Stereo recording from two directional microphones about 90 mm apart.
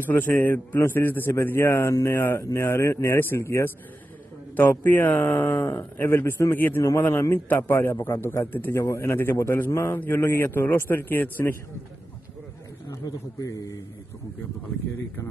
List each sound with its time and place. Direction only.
0.0 s speech: 25° left (ahead or behind)
4.6 s speech: 20° left (ahead or behind)
12.9 s a man's voice: 40° left (ahead or behind)